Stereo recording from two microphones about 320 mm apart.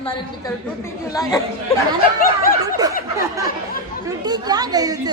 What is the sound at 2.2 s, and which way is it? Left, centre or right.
Speech, left.